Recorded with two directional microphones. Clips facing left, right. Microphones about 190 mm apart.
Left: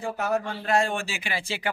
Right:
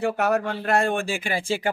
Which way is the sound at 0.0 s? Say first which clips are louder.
Right 5 dB; 65° right (ahead or behind).